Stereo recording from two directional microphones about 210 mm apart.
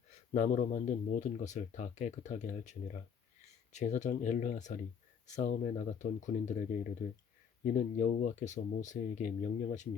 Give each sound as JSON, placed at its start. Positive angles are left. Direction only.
{"t": 0.3, "sound": "speech", "side_deg": 40}